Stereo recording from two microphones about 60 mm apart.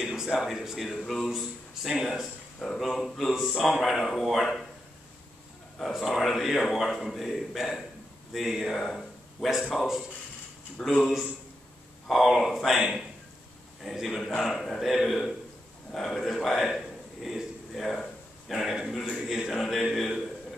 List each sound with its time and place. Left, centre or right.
0.0 s speech: centre
5.8 s a man's voice: centre
10.9 s a man's voice: centre